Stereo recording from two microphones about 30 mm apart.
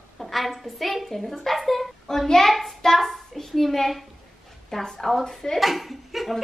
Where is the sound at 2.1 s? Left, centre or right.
Centre.